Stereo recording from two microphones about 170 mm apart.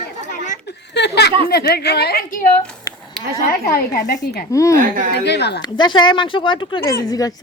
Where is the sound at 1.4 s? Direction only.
70° left (ahead or behind).